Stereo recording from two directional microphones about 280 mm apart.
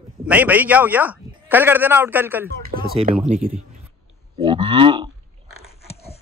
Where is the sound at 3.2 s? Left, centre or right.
Right.